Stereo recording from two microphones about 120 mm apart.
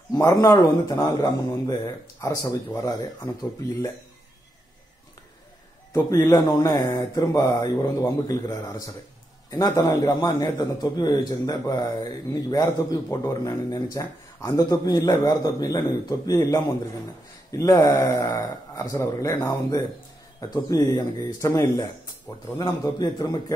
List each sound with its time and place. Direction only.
0.1 s a man's voice: 30° left (ahead or behind)
5.9 s a man's voice: 20° left (ahead or behind)
22.3 s a man's voice: 40° left (ahead or behind)